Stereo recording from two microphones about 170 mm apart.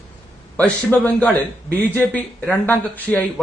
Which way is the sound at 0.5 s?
10° left (ahead or behind).